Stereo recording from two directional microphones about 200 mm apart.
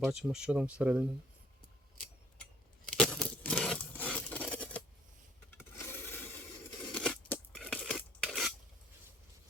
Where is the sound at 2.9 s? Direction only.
5° left (ahead or behind).